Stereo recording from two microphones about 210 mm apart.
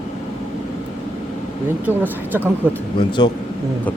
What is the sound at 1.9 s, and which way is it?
Speech, 10° right (ahead or behind).